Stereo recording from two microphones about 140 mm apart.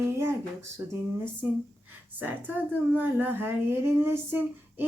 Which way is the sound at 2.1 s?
10° right (ahead or behind).